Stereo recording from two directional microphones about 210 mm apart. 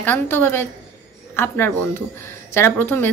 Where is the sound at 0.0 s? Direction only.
10° left (ahead or behind).